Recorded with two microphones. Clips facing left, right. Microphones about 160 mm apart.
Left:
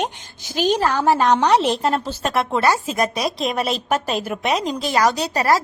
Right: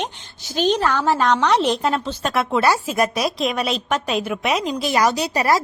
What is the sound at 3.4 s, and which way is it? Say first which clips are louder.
Speech: even; centre (ahead or behind).